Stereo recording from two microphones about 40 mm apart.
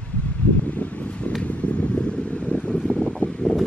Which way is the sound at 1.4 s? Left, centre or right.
Left.